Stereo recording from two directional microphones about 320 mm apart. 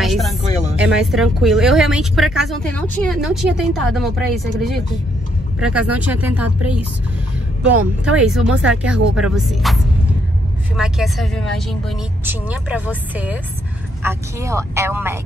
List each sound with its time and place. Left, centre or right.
0.0 s music: centre
0.5 s music: centre
0.7 s speech: centre
7.6 s speech: centre
10.8 s speech: centre